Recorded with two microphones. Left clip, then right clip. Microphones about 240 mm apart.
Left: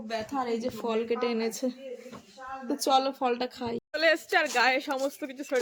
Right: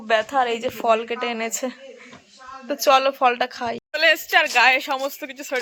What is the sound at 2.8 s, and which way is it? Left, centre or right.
A woman's voice, centre.